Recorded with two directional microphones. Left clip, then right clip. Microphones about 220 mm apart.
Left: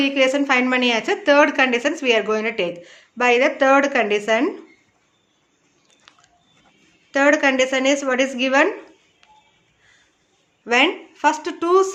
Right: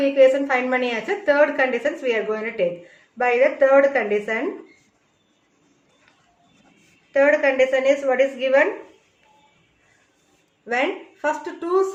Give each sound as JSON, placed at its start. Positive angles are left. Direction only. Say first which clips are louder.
{"t": 0.0, "sound": "a woman's voice", "louder": "right 2 dB", "side_deg": 45}
{"t": 7.1, "sound": "a woman's voice", "louder": "left 1 dB", "side_deg": 45}
{"t": 10.7, "sound": "a woman's voice", "louder": "left 5 dB", "side_deg": 45}